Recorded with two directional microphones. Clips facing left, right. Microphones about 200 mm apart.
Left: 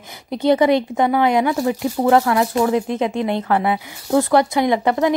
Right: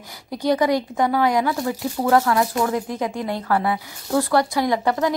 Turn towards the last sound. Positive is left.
turn(degrees=20)  # may be behind; listen again after turning